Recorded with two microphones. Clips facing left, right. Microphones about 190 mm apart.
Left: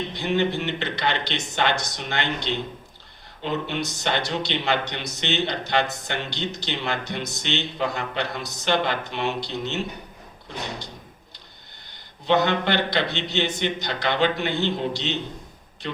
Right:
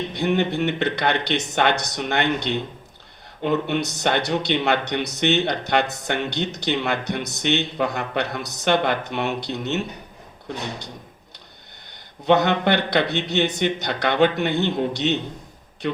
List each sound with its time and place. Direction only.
0.1 s speech: 55° right (ahead or behind)
12.2 s speech: 60° right (ahead or behind)